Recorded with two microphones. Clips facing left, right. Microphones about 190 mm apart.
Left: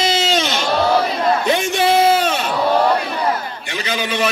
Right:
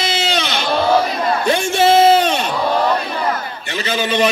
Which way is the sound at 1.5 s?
15° left (ahead or behind).